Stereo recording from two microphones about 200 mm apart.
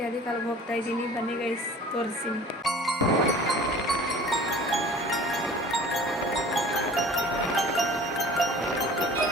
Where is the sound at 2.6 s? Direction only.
Centre (ahead or behind).